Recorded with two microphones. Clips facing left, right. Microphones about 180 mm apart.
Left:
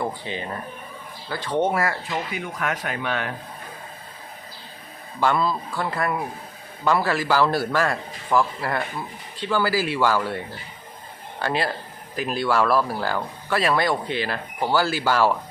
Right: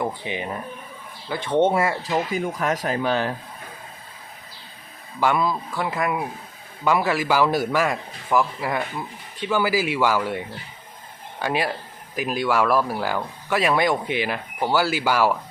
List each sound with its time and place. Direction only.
0.0 s speech: 15° right (ahead or behind)
2.0 s speech: 35° right (ahead or behind)
5.2 s speech: 15° right (ahead or behind)